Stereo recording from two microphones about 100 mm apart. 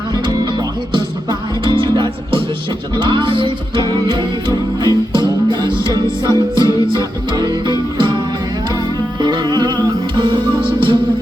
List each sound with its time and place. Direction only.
0.9 s music: 50° right (ahead or behind)
3.8 s music: 45° right (ahead or behind)
9.2 s music: 45° right (ahead or behind)